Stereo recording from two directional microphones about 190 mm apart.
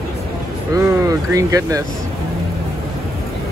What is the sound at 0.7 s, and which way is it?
Speech, 15° right (ahead or behind).